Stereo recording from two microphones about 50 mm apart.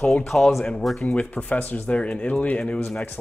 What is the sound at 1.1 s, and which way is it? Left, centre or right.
Speech, left.